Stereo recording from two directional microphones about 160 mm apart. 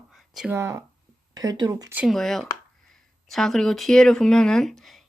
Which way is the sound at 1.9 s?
Centre (ahead or behind).